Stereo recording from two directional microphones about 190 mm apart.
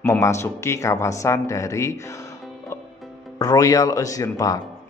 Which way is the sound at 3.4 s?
20° left (ahead or behind).